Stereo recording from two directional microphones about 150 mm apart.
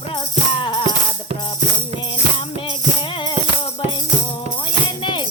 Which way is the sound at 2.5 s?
35° left (ahead or behind).